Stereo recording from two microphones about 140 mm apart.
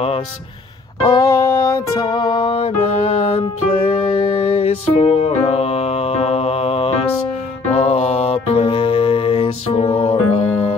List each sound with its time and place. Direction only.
1.0 s music: 25° left (ahead or behind); by 10.4 s 45° left (ahead or behind)